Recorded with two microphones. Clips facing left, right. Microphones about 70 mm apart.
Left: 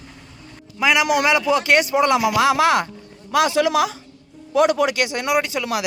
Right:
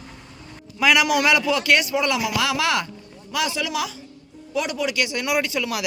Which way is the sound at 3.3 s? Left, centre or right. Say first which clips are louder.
Left 8 dB; left.